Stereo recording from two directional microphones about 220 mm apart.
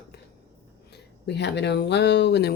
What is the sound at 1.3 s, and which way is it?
Speech, 50° left (ahead or behind).